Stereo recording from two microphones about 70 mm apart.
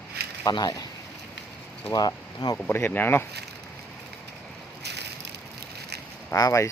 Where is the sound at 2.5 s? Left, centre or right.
Left.